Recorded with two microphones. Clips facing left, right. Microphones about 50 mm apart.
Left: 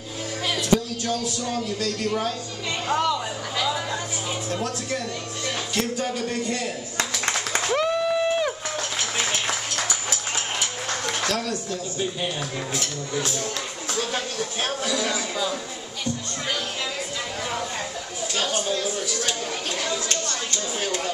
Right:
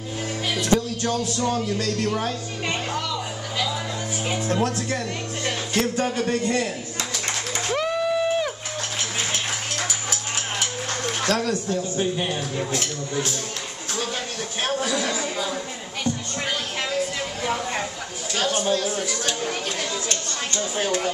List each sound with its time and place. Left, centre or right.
0.6 s speech: right
4.5 s speech: right
7.7 s a sound: centre
11.2 s speech: right
14.6 s speech: right
20.1 s a sound: right